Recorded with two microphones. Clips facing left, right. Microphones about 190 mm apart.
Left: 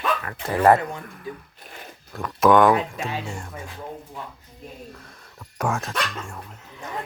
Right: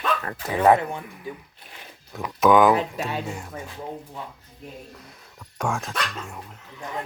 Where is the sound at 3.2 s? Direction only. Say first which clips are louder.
Right 1 dB; 5° right (ahead or behind).